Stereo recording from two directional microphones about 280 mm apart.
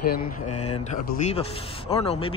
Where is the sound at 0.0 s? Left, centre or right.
Left.